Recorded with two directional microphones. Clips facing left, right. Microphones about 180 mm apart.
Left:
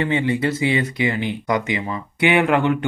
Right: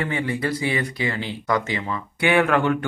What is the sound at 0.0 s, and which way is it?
Speech, 25° left (ahead or behind).